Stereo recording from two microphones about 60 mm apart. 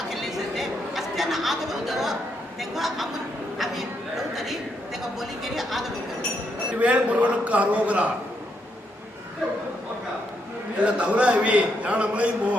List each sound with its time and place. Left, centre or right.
0.1 s chatter: centre
2.6 s a sound: centre
6.7 s a man's voice: right
10.8 s a man's voice: centre